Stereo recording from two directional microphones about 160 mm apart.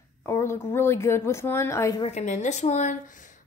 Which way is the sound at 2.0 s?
40° left (ahead or behind).